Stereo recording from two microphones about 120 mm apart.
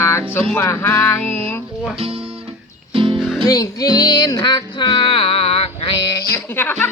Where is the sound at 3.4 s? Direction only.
30° left (ahead or behind); by 6.0 s 50° left (ahead or behind).